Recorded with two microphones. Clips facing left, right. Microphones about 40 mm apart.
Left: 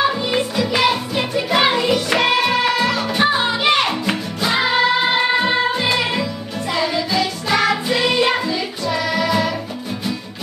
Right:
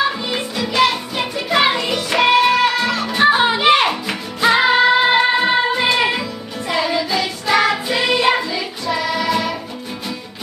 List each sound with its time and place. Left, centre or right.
0.1 s music: centre
3.3 s music: right
3.5 s music: centre